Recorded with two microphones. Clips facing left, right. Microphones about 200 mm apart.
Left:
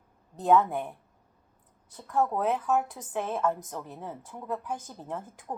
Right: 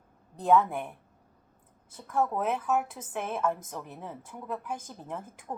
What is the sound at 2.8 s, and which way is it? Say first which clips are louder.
A woman's voice: left 2 dB; 15° left (ahead or behind).